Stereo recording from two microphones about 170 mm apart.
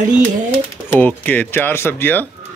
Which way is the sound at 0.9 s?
10° left (ahead or behind).